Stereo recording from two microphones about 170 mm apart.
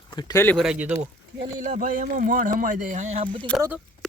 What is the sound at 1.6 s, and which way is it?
Speech, 50° right (ahead or behind).